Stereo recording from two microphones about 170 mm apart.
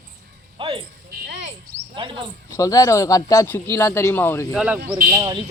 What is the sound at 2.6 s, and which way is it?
Speech, 20° left (ahead or behind).